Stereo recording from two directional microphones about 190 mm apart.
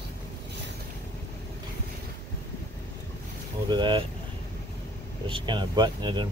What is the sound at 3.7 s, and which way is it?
Vehicle, 25° right (ahead or behind).